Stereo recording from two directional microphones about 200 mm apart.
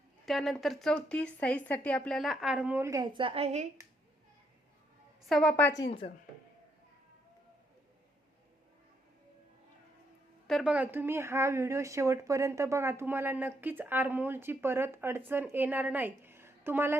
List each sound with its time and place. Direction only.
0.3 s speech: centre (ahead or behind); by 3.7 s 30° right (ahead or behind)
5.2 s speech: 5° left (ahead or behind)
5.8 s speech: 25° left (ahead or behind)
10.4 s a woman's voice: centre (ahead or behind)